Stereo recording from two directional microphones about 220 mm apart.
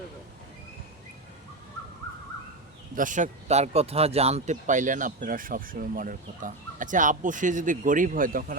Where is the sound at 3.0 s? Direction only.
35° right (ahead or behind).